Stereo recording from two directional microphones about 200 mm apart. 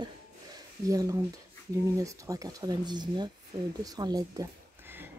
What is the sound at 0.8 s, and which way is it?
Speech, 15° right (ahead or behind).